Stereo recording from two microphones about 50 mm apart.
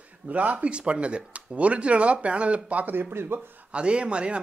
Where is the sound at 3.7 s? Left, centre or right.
Right.